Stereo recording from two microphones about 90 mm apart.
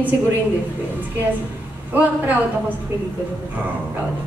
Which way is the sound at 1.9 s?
20° right (ahead or behind).